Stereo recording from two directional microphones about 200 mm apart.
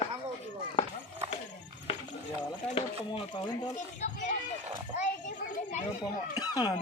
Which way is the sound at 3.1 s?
30° left (ahead or behind).